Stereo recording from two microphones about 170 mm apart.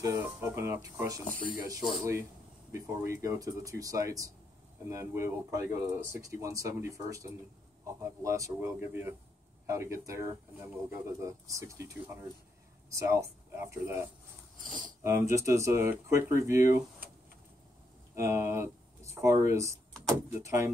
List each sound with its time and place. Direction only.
0.0 s speech: 15° right (ahead or behind)
2.7 s speech: 15° right (ahead or behind)
14.6 s speech: 50° right (ahead or behind)
15.0 s speech: 15° right (ahead or behind)
18.1 s speech: 15° right (ahead or behind)